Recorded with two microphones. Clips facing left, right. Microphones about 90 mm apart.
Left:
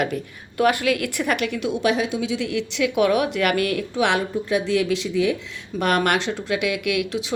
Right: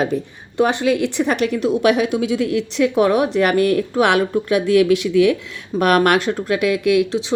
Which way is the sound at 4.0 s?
55° right (ahead or behind).